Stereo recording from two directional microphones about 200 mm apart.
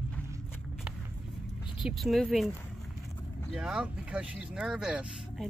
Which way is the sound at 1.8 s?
Centre (ahead or behind).